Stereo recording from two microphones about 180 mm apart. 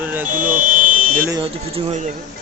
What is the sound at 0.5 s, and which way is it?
Buzzer, 50° right (ahead or behind).